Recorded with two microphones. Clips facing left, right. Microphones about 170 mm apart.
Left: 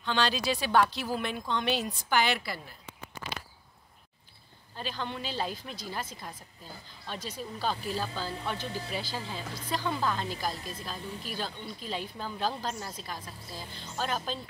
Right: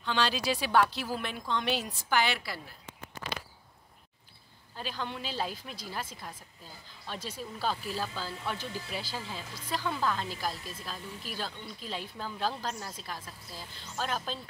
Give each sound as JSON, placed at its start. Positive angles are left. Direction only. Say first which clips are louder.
{"t": 0.0, "sound": "speech", "louder": "left 1 dB", "side_deg": -5}
{"t": 4.7, "sound": "speech", "louder": "left 1 dB", "side_deg": -5}
{"t": 8.5, "sound": "speech", "louder": "left 3 dB", "side_deg": 35}
{"t": 9.1, "sound": "speech", "louder": "left 2 dB", "side_deg": -5}
{"t": 10.5, "sound": "speech", "louder": "left 3 dB", "side_deg": 40}
{"t": 10.8, "sound": "speech", "louder": "left 3 dB", "side_deg": 0}